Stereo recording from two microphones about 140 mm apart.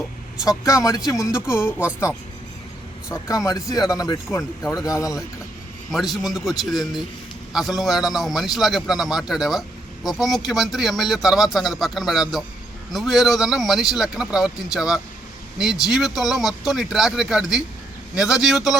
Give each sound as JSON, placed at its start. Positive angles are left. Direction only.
{"t": 0.6, "sound": "speech", "side_deg": 25}
{"t": 3.1, "sound": "speech", "side_deg": 20}
{"t": 5.9, "sound": "a man's voice", "side_deg": 0}